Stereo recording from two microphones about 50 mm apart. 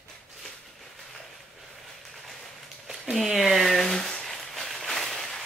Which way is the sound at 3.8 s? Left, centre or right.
Centre.